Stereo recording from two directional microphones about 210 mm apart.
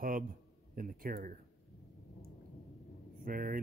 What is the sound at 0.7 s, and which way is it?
Speech, 45° right (ahead or behind).